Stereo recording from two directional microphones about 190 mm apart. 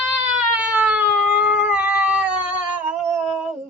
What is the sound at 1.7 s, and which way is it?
Cat, 5° right (ahead or behind).